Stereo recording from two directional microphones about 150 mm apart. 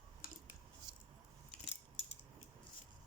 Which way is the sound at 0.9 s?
30° right (ahead or behind).